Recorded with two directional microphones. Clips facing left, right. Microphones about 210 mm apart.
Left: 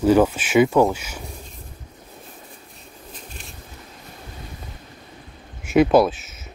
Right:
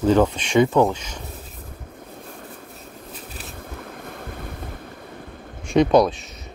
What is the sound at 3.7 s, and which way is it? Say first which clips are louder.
Vehicle: right 7 dB; 55° right (ahead or behind).